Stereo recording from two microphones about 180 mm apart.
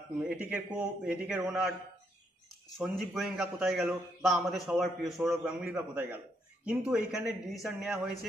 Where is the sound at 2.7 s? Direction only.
Centre (ahead or behind).